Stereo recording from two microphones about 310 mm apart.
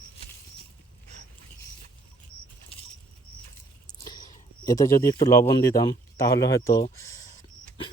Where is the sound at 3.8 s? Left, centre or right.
Centre.